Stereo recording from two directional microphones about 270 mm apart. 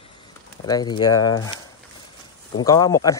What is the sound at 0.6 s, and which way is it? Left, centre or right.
Speech, centre.